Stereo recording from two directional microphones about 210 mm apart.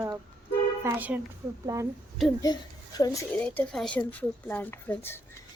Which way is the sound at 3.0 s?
15° left (ahead or behind).